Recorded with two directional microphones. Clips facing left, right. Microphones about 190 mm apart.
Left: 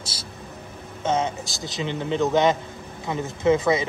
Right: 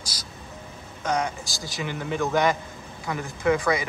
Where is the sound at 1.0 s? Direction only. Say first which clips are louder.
Left 3 dB; 25° left (ahead or behind).